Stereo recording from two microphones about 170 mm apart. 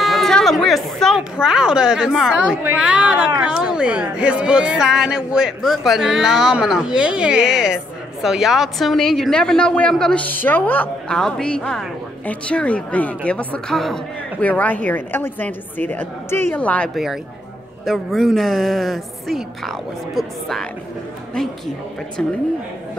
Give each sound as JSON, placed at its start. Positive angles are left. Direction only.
{"t": 0.0, "sound": "a woman's voice", "side_deg": 0}
{"t": 22.2, "sound": "a woman's voice", "side_deg": 5}